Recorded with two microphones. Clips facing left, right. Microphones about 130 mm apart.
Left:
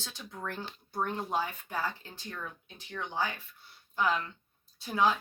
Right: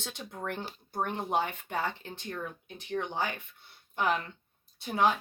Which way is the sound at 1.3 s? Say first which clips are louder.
Right 5 dB; 65° right (ahead or behind).